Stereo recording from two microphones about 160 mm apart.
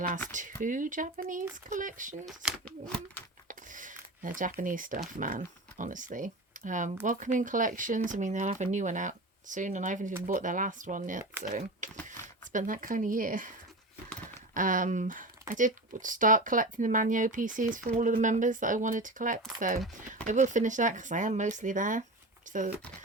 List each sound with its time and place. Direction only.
0.3 s speech: 55° right (ahead or behind)
2.2 s speech: 5° right (ahead or behind)
2.6 s a sound: 10° left (ahead or behind)
3.5 s a sound: 55° right (ahead or behind)
4.6 s speech: 55° right (ahead or behind)
14.1 s horse: 10° left (ahead or behind)
14.5 s speech: 55° right (ahead or behind)